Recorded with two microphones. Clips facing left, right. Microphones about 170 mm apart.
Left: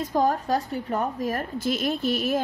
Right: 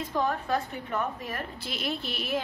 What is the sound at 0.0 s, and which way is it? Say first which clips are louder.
A woman's voice: left 6 dB; 40° left (ahead or behind).